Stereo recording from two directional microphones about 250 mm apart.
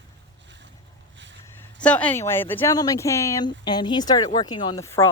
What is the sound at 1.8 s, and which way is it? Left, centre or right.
Speech, centre.